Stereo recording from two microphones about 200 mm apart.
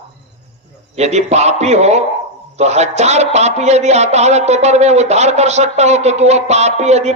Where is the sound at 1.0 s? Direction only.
35° right (ahead or behind).